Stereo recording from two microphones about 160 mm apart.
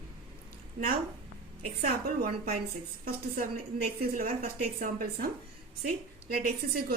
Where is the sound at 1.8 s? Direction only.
70° right (ahead or behind).